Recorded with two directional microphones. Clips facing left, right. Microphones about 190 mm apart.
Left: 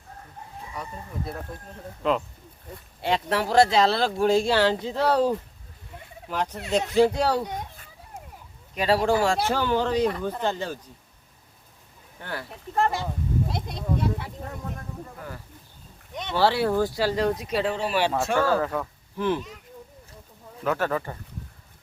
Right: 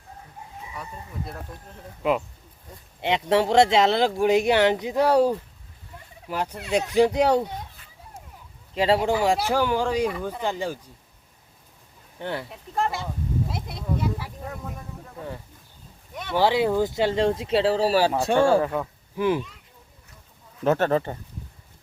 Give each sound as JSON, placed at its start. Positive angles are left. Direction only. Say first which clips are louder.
{"t": 0.7, "sound": "speech", "louder": "left 3 dB", "side_deg": 0}
{"t": 3.0, "sound": "speech", "louder": "right 4 dB", "side_deg": -25}
{"t": 6.3, "sound": "speech", "louder": "even", "side_deg": -10}
{"t": 8.7, "sound": "speech", "louder": "right 1 dB", "side_deg": -25}
{"t": 9.5, "sound": "speech", "louder": "right 1 dB", "side_deg": -10}
{"t": 12.2, "sound": "speech", "louder": "right 5 dB", "side_deg": -20}
{"t": 12.7, "sound": "speech", "louder": "left 2 dB", "side_deg": 0}
{"t": 16.3, "sound": "speech", "louder": "right 1 dB", "side_deg": -15}
{"t": 20.7, "sound": "speech", "louder": "right 5 dB", "side_deg": -25}